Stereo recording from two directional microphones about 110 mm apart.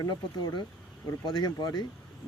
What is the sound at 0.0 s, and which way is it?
Speech, 40° left (ahead or behind).